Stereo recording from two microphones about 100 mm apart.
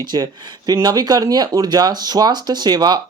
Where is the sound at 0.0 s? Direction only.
45° right (ahead or behind).